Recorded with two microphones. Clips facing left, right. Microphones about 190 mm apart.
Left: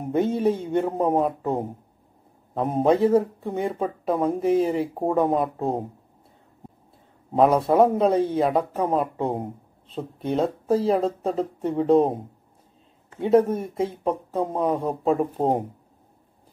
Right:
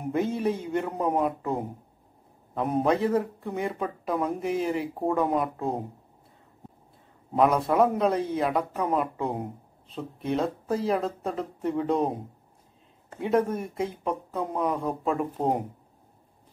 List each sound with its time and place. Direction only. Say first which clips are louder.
0.2 s speech: left 6 dB; 30° left (ahead or behind)
7.3 s speech: left 4 dB; 30° left (ahead or behind)
13.2 s speech: left 6 dB; 30° left (ahead or behind)